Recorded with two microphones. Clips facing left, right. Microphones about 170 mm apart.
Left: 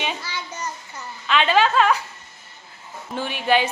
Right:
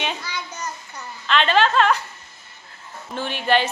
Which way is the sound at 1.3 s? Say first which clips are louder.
Even; 10° left (ahead or behind).